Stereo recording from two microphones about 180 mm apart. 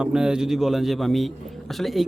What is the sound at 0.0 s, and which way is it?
Speech, 5° right (ahead or behind).